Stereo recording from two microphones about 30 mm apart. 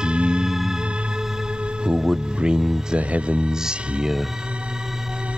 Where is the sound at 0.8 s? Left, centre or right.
Right.